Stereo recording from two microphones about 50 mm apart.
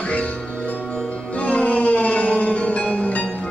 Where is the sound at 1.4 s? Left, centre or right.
Left.